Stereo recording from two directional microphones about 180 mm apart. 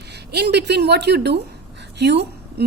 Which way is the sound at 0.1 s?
65° right (ahead or behind).